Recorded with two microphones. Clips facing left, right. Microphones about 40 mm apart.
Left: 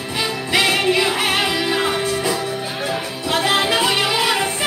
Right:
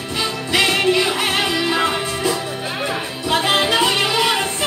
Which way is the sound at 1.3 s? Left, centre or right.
Centre.